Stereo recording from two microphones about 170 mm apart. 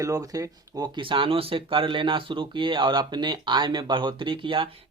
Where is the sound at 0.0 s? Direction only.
20° right (ahead or behind).